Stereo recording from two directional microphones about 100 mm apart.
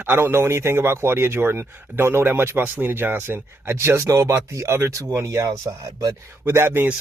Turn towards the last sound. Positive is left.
turn(degrees=-20)  # may be behind; listen again after turning